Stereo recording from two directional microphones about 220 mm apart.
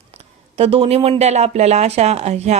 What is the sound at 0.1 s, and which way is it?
Speech, 30° right (ahead or behind).